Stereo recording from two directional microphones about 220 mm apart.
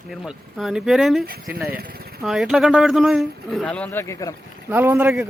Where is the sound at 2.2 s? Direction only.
Centre (ahead or behind).